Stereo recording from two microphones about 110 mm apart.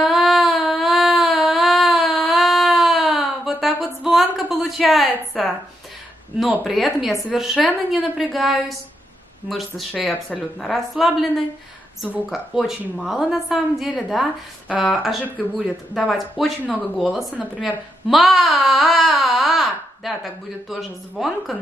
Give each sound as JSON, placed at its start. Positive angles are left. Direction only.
{"t": 0.0, "sound": "a sound", "side_deg": 0}
{"t": 5.4, "sound": "a woman's voice", "side_deg": 0}
{"t": 6.6, "sound": "a woman's voice", "side_deg": 0}
{"t": 16.6, "sound": "speech", "side_deg": 15}
{"t": 17.0, "sound": "a woman's voice", "side_deg": 0}